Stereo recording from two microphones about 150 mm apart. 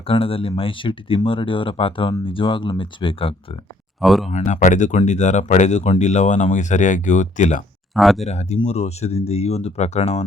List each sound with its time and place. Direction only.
0.0 s speech: 40° left (ahead or behind)
4.0 s speech: centre (ahead or behind)
4.3 s speech: 50° left (ahead or behind)
7.9 s speech: centre (ahead or behind)
8.2 s speech: 45° left (ahead or behind)